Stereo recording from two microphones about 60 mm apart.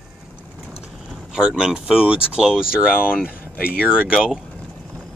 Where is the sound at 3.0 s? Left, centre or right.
Centre.